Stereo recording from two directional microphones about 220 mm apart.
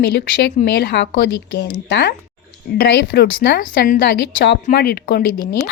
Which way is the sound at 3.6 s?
40° left (ahead or behind).